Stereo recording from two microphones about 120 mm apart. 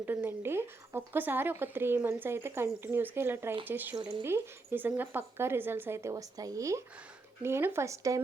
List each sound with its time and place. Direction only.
0.0 s speech: 15° right (ahead or behind)